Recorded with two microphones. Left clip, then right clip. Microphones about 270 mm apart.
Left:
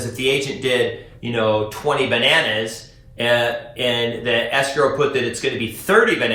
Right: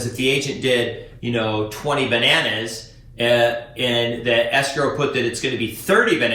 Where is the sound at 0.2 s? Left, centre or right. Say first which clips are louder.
Left 1 dB; centre.